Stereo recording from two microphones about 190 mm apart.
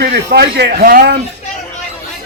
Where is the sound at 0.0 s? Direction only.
60° right (ahead or behind).